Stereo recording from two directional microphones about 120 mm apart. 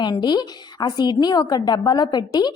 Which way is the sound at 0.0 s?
40° left (ahead or behind).